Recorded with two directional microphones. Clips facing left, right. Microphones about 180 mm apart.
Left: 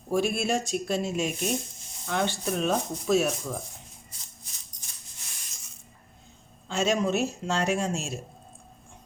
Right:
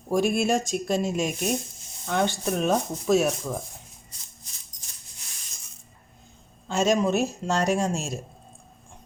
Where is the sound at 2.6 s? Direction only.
45° right (ahead or behind).